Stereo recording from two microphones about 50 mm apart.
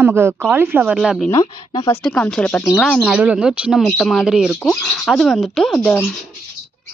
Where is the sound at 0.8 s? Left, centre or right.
Centre.